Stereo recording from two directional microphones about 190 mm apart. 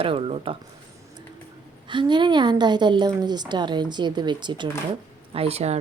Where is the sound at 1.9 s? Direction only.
25° right (ahead or behind).